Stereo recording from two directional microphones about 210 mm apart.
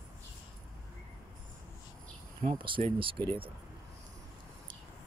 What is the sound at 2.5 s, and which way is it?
Speech, 25° right (ahead or behind).